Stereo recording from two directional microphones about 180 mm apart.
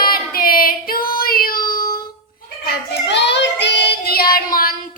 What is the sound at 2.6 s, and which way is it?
Child singing, 65° left (ahead or behind).